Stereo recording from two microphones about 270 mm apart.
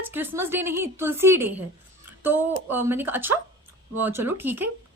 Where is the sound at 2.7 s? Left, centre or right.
Centre.